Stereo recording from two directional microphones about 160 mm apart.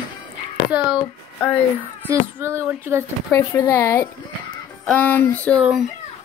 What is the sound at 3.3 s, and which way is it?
Speech, 15° left (ahead or behind).